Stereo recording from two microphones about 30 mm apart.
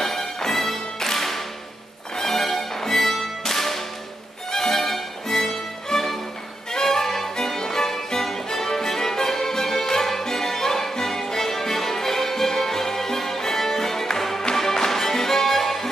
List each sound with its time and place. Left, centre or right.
0.0 s music: centre
3.4 s whip: centre
4.5 s music: centre